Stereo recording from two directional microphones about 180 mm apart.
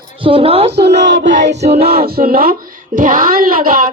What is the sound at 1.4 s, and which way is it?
Speech, 40° right (ahead or behind).